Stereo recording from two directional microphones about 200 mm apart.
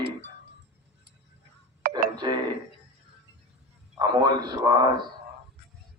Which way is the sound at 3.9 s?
20° right (ahead or behind).